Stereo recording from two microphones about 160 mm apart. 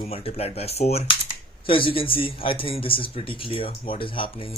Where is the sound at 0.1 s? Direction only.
40° left (ahead or behind).